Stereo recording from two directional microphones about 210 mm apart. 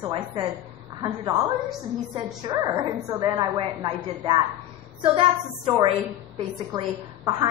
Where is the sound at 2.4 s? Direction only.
20° right (ahead or behind).